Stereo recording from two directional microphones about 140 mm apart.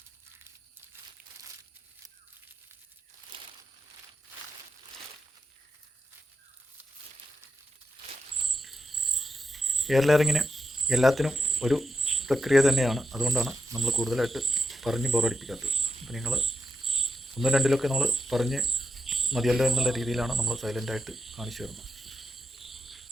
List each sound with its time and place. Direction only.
3.3 s a sound: 40° right (ahead or behind)
8.4 s cricket: centre (ahead or behind)
11.5 s speech: centre (ahead or behind)